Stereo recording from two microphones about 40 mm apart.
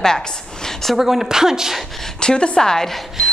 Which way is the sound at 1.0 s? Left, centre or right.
Centre.